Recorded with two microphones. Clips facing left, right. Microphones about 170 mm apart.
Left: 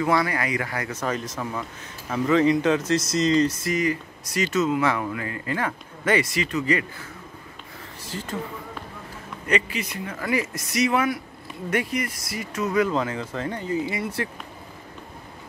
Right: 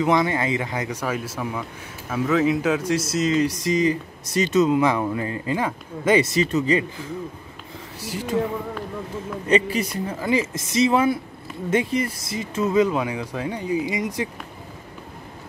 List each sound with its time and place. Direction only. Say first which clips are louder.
0.0 s speech: right 3 dB; 20° right (ahead or behind)
6.4 s speech: right 4 dB; 25° right (ahead or behind)
8.1 s speech: right 6 dB; 10° right (ahead or behind)
9.5 s a man's voice: right 5 dB; 40° right (ahead or behind)
10.1 s speech: right 3 dB; 25° right (ahead or behind)
12.9 s speech: right 1 dB; 10° right (ahead or behind)